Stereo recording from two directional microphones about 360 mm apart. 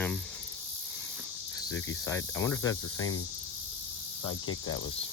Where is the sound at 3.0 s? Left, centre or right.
Left.